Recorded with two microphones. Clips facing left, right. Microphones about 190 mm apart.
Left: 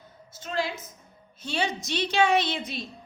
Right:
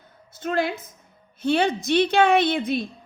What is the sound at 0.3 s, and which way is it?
Speech, 55° right (ahead or behind).